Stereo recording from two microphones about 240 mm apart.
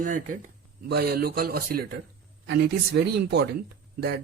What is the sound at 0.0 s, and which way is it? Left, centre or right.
Speech, right.